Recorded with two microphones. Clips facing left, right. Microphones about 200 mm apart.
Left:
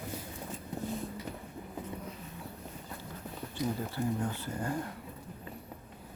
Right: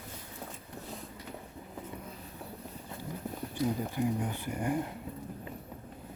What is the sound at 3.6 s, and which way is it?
Speech, 15° right (ahead or behind).